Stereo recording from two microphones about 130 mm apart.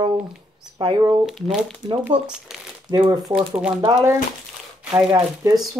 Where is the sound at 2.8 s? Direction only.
35° right (ahead or behind).